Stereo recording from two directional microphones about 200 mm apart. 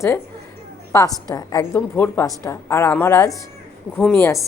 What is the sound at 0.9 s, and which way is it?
A woman's voice, 20° left (ahead or behind).